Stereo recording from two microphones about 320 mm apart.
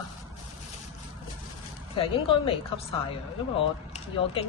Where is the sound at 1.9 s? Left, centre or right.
Centre.